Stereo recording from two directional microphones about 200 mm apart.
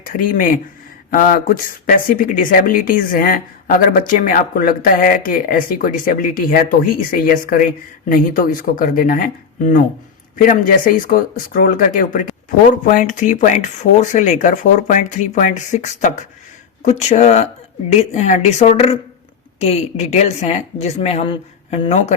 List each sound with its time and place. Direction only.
0.0 s speech: 45° left (ahead or behind)
10.3 s speech: 45° left (ahead or behind)